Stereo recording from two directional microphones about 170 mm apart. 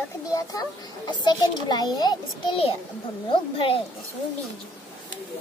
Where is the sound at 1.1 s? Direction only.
25° left (ahead or behind).